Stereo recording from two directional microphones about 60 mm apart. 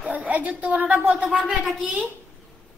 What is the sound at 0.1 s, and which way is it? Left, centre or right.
A woman's voice, right.